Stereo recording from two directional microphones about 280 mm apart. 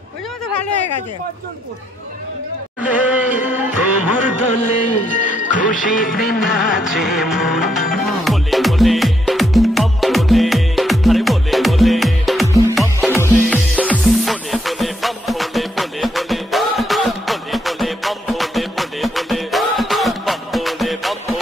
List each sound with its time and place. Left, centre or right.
2.8 s a sound: centre
3.4 s music: centre
4.4 s music: left
6.9 s music: centre